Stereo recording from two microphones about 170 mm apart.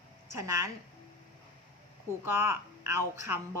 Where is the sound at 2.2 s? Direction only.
15° right (ahead or behind).